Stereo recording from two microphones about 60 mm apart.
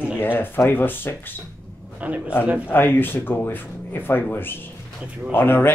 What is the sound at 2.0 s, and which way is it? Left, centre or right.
Speech, right.